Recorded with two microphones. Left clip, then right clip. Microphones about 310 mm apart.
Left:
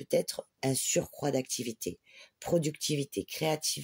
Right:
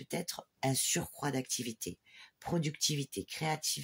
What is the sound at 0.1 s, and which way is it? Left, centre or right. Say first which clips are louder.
Speech: left 10 dB; centre.